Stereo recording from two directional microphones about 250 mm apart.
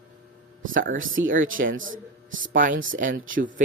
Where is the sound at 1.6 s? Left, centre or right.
Right.